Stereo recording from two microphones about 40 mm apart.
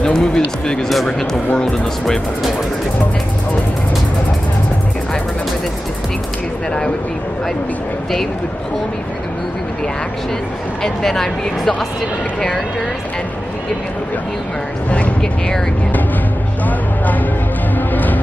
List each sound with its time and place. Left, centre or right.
0.0 s speech: centre
10.8 s speech: centre
16.6 s vehicle: left
17.7 s music: left